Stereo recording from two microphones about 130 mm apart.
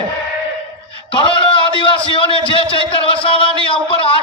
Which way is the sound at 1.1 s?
40° left (ahead or behind).